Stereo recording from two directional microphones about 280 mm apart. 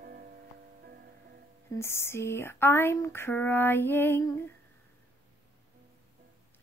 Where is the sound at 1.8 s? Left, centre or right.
Centre.